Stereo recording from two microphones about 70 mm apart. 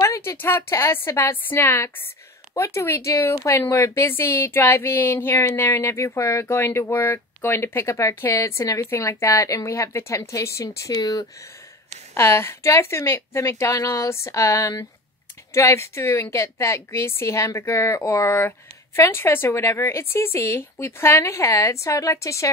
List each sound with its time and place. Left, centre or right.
0.0 s a sound: left
0.4 s speech: left
12.1 s speech: left